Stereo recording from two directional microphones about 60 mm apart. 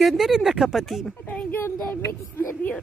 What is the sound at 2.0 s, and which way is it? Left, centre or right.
Speech, left.